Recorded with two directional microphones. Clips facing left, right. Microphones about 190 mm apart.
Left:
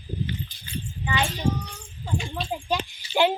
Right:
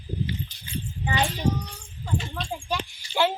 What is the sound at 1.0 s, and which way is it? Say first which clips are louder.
Speech: right 1 dB; 40° right (ahead or behind).